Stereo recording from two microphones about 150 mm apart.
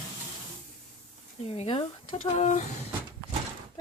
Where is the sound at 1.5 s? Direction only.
40° left (ahead or behind).